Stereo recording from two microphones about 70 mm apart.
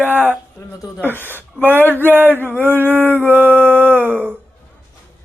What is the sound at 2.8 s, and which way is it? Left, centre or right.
Groan, right.